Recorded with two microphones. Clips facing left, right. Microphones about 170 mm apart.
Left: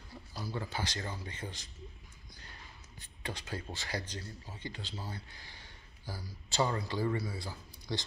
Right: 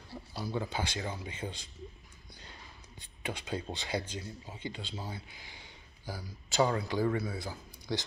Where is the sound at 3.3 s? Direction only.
20° right (ahead or behind).